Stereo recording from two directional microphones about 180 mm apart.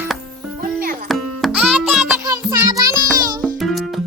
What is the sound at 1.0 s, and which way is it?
Music, centre (ahead or behind).